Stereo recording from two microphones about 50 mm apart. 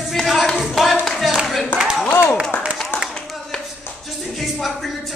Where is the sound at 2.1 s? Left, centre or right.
Left.